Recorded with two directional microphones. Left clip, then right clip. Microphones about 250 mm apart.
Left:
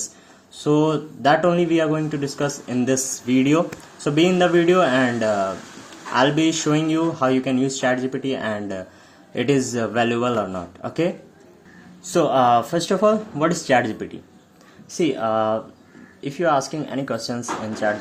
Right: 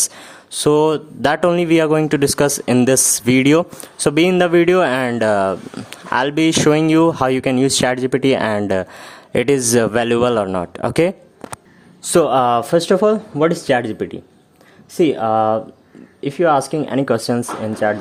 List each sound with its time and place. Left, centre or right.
0.6 s speech: right
12.1 s speech: right